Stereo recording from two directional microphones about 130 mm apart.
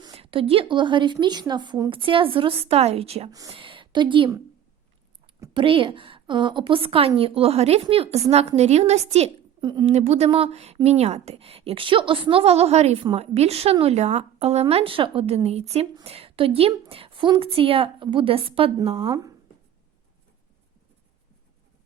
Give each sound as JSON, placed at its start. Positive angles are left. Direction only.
{"t": 0.2, "sound": "a woman's voice", "side_deg": -45}
{"t": 5.5, "sound": "a woman's voice", "side_deg": -40}
{"t": 9.6, "sound": "a woman's voice", "side_deg": -35}
{"t": 9.8, "sound": "a woman's voice", "side_deg": -55}
{"t": 19.0, "sound": "speech", "side_deg": -25}